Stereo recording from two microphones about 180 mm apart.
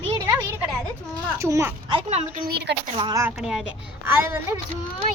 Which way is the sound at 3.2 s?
5° right (ahead or behind).